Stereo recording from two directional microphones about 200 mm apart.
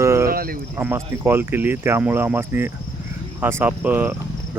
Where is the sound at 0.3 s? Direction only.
45° right (ahead or behind).